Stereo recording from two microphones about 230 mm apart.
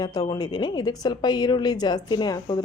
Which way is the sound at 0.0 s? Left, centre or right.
Centre.